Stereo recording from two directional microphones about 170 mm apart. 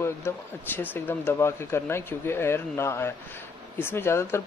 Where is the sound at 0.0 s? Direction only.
15° left (ahead or behind).